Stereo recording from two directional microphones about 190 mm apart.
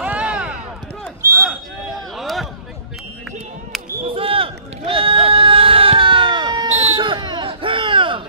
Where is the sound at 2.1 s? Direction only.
Centre (ahead or behind).